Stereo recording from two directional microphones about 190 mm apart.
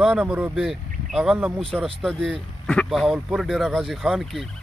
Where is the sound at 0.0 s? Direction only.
5° right (ahead or behind).